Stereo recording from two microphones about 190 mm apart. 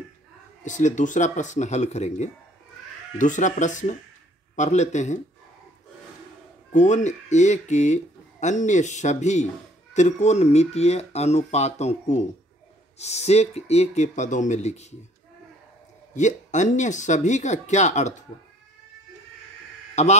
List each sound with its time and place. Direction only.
0.7 s speech: 40° left (ahead or behind)
6.7 s speech: 40° left (ahead or behind)
16.2 s speech: 40° left (ahead or behind)
20.0 s speech: 35° left (ahead or behind)